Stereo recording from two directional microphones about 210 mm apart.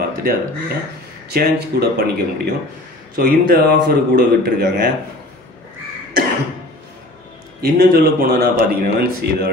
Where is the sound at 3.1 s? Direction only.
45° right (ahead or behind).